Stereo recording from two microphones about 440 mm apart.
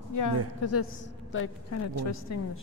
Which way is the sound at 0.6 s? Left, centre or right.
Left.